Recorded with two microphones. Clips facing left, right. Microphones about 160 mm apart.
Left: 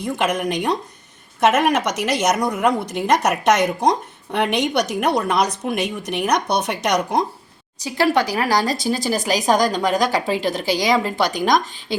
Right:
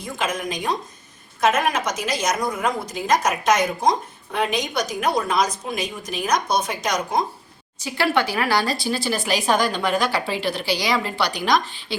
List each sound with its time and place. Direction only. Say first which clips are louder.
0.0 s a woman's voice: left 5 dB; 65° left (ahead or behind)
7.8 s speech: left 3 dB; 40° left (ahead or behind)